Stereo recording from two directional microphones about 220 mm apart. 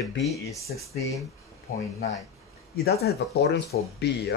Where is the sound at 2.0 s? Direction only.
30° left (ahead or behind).